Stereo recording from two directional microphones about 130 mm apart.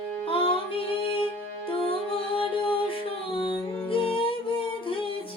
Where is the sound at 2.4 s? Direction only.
45° left (ahead or behind).